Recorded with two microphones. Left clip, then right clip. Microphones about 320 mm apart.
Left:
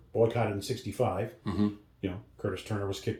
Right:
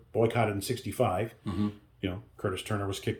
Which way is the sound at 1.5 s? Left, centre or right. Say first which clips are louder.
Left 2 dB; centre.